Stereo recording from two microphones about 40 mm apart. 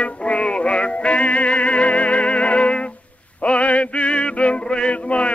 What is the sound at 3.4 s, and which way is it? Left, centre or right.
Male singing, left.